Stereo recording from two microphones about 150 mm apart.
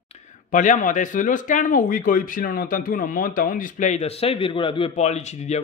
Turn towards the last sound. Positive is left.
turn(degrees=50)  # may be behind; listen again after turning